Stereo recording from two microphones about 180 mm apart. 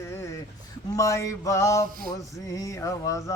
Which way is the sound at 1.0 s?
15° left (ahead or behind).